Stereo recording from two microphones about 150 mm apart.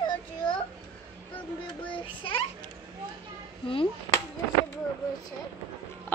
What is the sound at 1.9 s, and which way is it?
Child singing, 35° left (ahead or behind).